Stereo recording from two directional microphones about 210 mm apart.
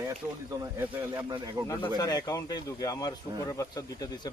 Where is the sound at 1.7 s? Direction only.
20° left (ahead or behind).